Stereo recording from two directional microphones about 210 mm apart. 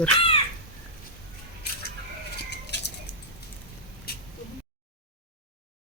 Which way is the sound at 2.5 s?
55° left (ahead or behind).